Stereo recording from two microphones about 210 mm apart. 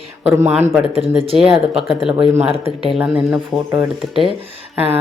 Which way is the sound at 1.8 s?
Centre (ahead or behind).